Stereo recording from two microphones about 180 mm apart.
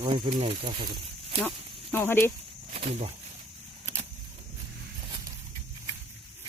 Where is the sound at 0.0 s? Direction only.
35° right (ahead or behind).